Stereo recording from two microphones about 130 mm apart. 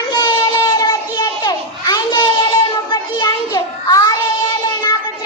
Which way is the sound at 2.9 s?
35° left (ahead or behind).